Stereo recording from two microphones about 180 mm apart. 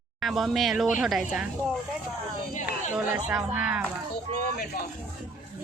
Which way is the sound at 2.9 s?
10° right (ahead or behind).